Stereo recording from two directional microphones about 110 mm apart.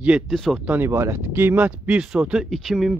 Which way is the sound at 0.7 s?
20° right (ahead or behind).